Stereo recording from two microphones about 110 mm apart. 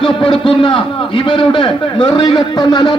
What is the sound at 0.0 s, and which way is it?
A man's voice, 50° left (ahead or behind).